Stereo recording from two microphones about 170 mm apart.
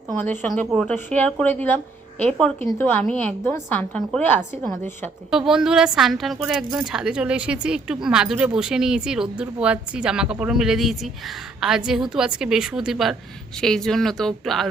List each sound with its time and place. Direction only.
0.4 s a woman's voice: 5° left (ahead or behind)
5.3 s a woman's voice: 5° right (ahead or behind)